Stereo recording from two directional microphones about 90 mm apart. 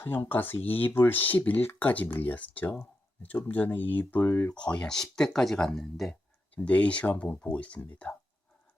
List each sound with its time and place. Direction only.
0.0 s speech: 25° left (ahead or behind)
4.5 s speech: 10° left (ahead or behind)
6.5 s speech: 15° left (ahead or behind)